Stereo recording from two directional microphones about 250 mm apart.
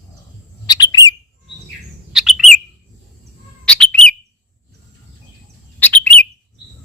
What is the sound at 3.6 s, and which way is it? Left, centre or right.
Bird, centre.